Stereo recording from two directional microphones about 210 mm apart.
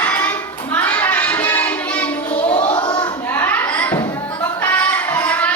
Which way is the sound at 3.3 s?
10° left (ahead or behind).